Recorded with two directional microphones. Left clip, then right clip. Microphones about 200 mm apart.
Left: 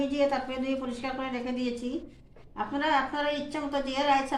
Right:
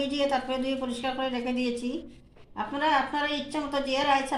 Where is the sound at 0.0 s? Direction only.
30° right (ahead or behind).